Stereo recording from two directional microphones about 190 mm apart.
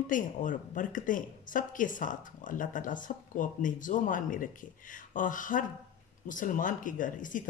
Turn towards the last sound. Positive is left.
turn(degrees=45)  # may be behind; listen again after turning